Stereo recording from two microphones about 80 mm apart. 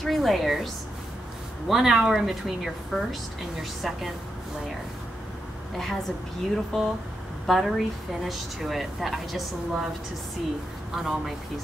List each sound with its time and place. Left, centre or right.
0.0 s a woman's voice: centre
1.7 s a woman's voice: centre
5.8 s a woman's voice: centre
11.0 s a woman's voice: centre